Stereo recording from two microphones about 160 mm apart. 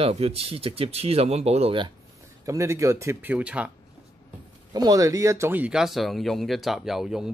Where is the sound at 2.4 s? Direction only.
20° right (ahead or behind).